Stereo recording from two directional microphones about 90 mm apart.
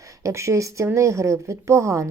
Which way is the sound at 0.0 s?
35° right (ahead or behind).